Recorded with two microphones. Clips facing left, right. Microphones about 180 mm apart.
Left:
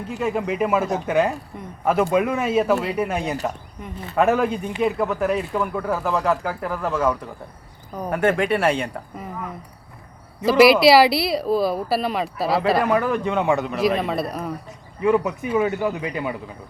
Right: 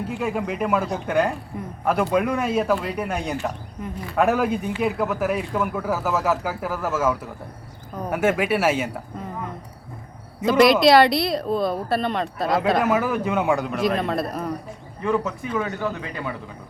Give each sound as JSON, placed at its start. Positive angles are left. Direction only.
{"t": 0.1, "sound": "speech", "side_deg": 0}
{"t": 10.4, "sound": "speech", "side_deg": 5}
{"t": 15.0, "sound": "a man's voice", "side_deg": 15}